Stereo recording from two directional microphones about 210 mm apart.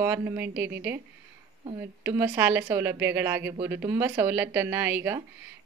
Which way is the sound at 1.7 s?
10° right (ahead or behind).